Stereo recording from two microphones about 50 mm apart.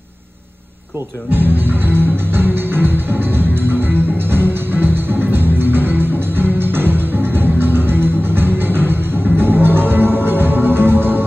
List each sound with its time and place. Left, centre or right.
1.3 s music: right